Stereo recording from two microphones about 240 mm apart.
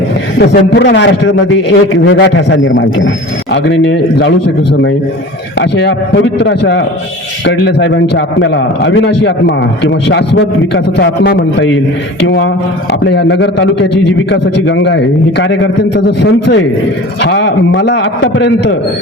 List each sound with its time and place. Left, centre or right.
0.3 s a man's voice: left
5.5 s a man's voice: left
12.9 s a man's voice: left